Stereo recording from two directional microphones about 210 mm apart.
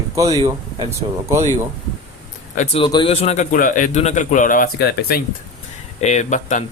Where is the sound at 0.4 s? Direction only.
15° right (ahead or behind).